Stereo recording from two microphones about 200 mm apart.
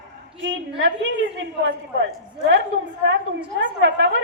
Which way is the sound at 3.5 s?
70° right (ahead or behind).